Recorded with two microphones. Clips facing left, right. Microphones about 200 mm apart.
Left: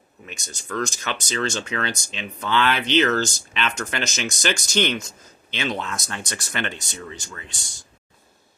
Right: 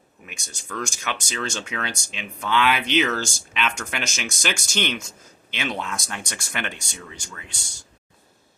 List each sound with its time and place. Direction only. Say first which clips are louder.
0.3 s speech: left 4 dB; 10° right (ahead or behind)